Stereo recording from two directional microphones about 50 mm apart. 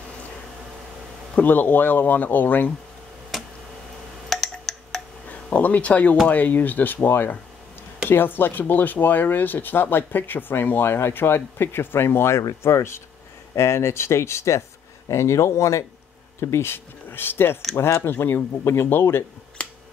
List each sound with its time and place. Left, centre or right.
1.3 s speech: left
3.3 s a sound: centre
5.3 s speech: left
17.7 s speech: left
18.0 s speech: left